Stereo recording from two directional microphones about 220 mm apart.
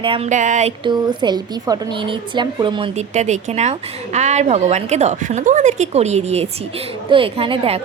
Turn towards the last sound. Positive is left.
turn(degrees=-25)  # may be behind; listen again after turning